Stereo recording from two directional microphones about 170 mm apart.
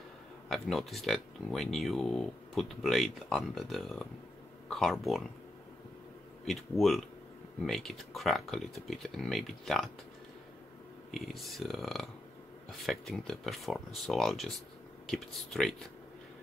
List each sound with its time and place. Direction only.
0.5 s speech: centre (ahead or behind)
6.4 s speech: centre (ahead or behind)
11.1 s speech: centre (ahead or behind)